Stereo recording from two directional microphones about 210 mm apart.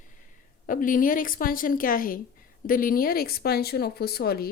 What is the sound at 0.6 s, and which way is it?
Speech, 40° left (ahead or behind).